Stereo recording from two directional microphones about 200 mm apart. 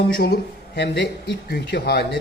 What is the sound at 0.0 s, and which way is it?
A man's voice, 50° left (ahead or behind).